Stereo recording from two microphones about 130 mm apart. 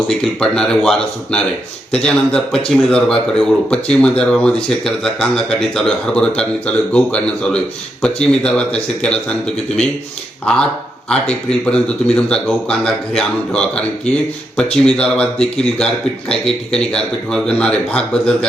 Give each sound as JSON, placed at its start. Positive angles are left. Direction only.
{"t": 0.1, "sound": "a man's voice", "side_deg": 5}
{"t": 11.1, "sound": "speech", "side_deg": 5}